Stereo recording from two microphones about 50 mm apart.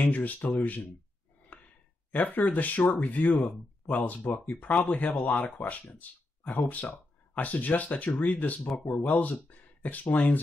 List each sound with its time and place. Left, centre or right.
0.0 s speech: left
1.5 s sigh: left
2.1 s speech: left
8.5 s speech: centre
8.8 s speech: left